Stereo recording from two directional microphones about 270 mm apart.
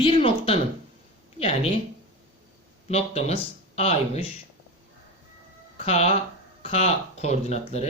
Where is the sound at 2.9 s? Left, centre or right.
Left.